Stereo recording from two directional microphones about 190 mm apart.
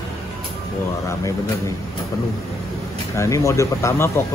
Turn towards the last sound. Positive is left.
turn(degrees=15)  # may be behind; listen again after turning